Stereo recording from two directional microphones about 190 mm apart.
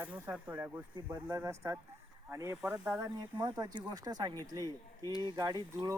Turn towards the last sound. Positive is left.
turn(degrees=-20)  # may be behind; listen again after turning